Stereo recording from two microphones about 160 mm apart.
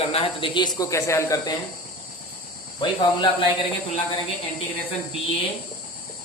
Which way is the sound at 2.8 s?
30° left (ahead or behind).